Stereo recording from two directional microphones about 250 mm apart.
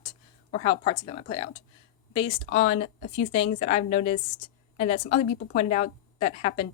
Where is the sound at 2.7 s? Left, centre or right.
Left.